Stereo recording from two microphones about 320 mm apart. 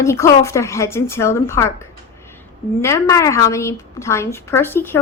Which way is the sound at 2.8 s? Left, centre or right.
Centre.